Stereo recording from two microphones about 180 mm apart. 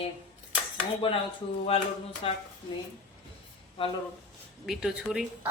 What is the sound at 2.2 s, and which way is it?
Speech, 30° left (ahead or behind).